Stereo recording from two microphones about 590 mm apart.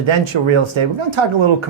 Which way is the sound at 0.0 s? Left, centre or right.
Right.